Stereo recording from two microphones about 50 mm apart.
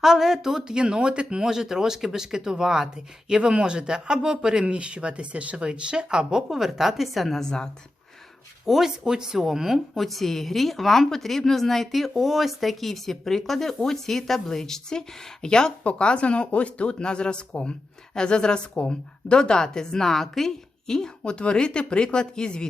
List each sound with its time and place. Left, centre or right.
0.0 s a woman's voice: centre
8.6 s speech: centre
9.9 s a woman's voice: centre